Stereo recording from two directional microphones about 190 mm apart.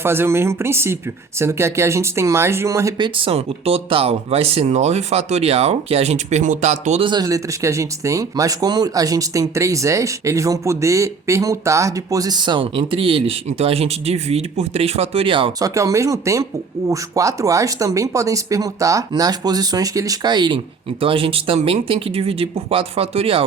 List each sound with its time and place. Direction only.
0.0 s speech: 10° right (ahead or behind)
3.2 s speech: 30° right (ahead or behind)
7.1 s speech: 20° right (ahead or behind)